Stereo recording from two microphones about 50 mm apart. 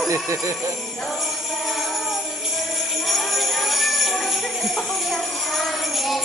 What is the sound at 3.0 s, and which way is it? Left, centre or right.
Jingle bell, centre.